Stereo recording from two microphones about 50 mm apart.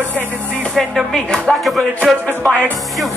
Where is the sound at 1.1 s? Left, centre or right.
Centre.